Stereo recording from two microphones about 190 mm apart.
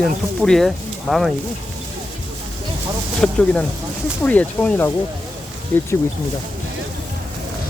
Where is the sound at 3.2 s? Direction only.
5° left (ahead or behind).